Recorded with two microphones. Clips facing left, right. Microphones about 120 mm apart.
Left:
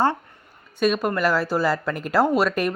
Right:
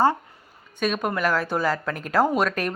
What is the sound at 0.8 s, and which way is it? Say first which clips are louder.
Speech: left 3 dB; 5° left (ahead or behind).